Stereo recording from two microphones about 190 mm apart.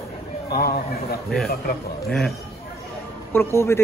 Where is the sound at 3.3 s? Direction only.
15° left (ahead or behind).